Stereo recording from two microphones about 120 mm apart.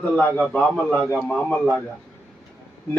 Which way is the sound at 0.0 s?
10° left (ahead or behind).